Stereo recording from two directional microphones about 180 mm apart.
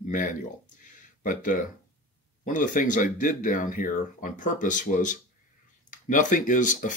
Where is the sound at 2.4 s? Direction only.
45° left (ahead or behind).